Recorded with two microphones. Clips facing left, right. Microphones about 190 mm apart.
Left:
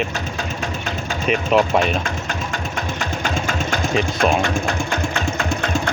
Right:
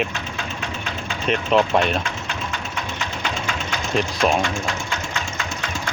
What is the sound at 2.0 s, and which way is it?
Sewing machine, 45° left (ahead or behind).